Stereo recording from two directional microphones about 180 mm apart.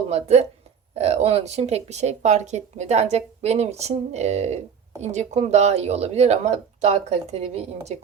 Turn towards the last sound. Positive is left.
turn(degrees=-35)  # may be behind; listen again after turning